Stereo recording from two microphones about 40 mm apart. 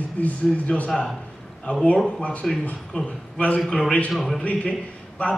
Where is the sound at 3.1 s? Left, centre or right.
Left.